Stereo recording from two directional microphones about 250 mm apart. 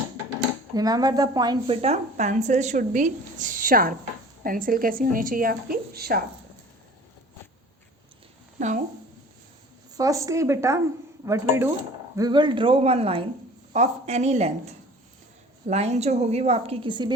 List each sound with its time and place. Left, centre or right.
0.7 s a woman's voice: centre; by 6.2 s right
8.5 s a woman's voice: right
9.9 s a woman's voice: centre